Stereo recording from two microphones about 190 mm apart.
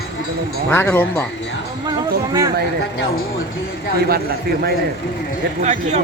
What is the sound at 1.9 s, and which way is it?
Speech, 20° right (ahead or behind).